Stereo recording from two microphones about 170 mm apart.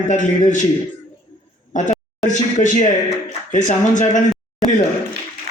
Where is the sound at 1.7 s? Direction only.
45° left (ahead or behind).